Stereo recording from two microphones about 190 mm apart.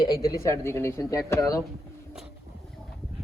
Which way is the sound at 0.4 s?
15° left (ahead or behind).